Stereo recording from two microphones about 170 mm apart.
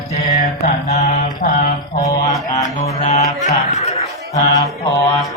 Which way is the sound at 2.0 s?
20° left (ahead or behind).